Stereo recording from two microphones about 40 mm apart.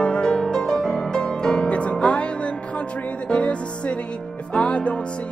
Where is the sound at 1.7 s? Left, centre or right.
Left.